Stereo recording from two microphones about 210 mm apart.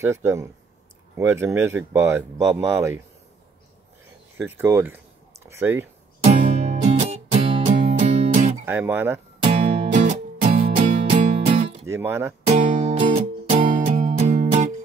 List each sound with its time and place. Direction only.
0.0 s speech: 15° right (ahead or behind)
4.4 s speech: 10° right (ahead or behind)
6.2 s music: 30° right (ahead or behind)
8.6 s speech: 10° right (ahead or behind)
9.4 s music: 30° right (ahead or behind)
11.0 s music: 30° right (ahead or behind)
11.8 s speech: 10° right (ahead or behind)
12.4 s music: 35° right (ahead or behind)